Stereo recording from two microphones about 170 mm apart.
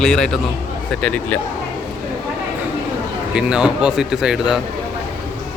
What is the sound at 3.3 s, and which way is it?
A man's voice, 5° right (ahead or behind).